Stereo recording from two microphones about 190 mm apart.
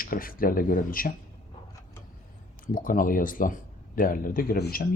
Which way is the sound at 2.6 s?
45° left (ahead or behind).